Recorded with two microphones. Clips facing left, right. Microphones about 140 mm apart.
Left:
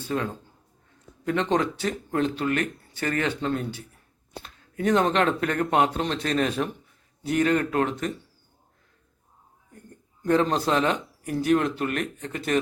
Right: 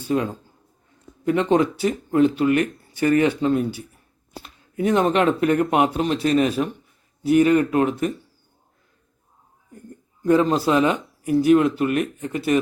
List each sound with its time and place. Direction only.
0.1 s speech: 15° right (ahead or behind)
10.2 s speech: 5° right (ahead or behind)